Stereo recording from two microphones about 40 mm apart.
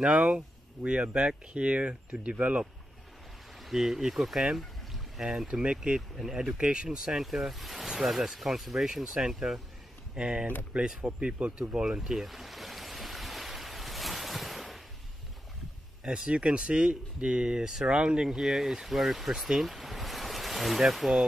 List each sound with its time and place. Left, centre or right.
0.0 s speech: right
3.6 s speech: centre
4.6 s pour: centre
5.2 s speech: centre
5.6 s speech: right
7.2 s speech: centre
8.8 s speech: centre
11.4 s speech: right
12.0 s stream: centre
16.0 s speech: right; by 21.3 s centre